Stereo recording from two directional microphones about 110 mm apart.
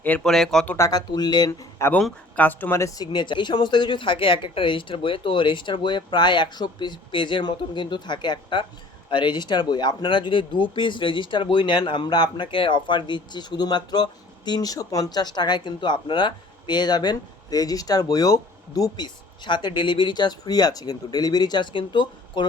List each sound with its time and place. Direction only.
0.0 s speech: 15° left (ahead or behind)
0.3 s speech: 5° left (ahead or behind)
0.8 s speech: 35° left (ahead or behind)
2.0 s speech: 10° left (ahead or behind)
2.8 s speech: 40° left (ahead or behind)